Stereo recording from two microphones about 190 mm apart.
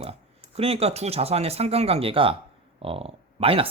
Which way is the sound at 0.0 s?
30° right (ahead or behind).